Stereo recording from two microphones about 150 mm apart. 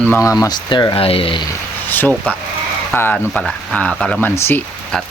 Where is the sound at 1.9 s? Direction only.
15° left (ahead or behind).